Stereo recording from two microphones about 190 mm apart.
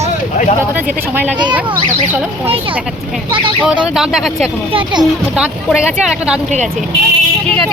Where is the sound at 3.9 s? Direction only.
Centre (ahead or behind).